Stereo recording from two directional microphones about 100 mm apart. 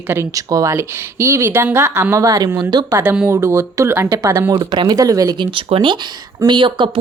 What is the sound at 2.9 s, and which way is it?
A woman's voice, 20° right (ahead or behind).